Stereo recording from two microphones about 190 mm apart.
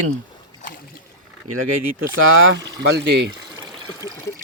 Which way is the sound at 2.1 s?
90° right.